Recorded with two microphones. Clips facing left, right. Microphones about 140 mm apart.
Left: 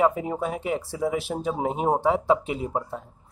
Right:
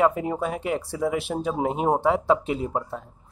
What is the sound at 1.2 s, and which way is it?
Speech, centre (ahead or behind).